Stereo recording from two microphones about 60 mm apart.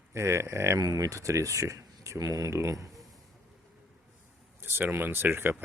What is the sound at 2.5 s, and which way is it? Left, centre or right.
Speech, right.